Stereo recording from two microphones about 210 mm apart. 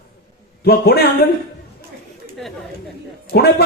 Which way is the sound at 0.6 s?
50° left (ahead or behind).